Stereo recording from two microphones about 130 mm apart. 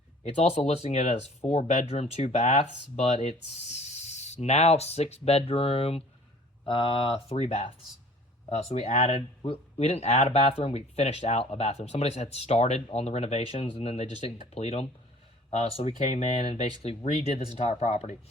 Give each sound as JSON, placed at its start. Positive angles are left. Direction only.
{"t": 0.2, "sound": "speech", "side_deg": 55}